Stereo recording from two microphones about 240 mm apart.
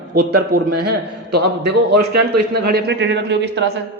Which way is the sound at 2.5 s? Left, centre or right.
Right.